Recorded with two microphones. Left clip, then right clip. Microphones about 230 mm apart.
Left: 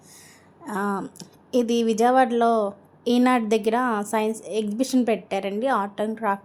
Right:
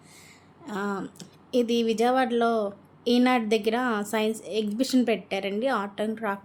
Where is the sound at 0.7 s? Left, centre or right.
Centre.